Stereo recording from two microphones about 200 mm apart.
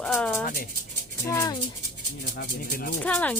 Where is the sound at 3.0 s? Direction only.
5° left (ahead or behind).